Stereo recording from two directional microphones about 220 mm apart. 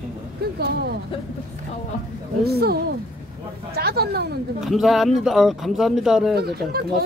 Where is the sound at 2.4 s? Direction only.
45° right (ahead or behind).